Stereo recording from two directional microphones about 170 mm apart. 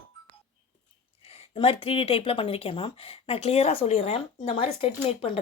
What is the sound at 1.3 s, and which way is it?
A woman's voice, 35° left (ahead or behind).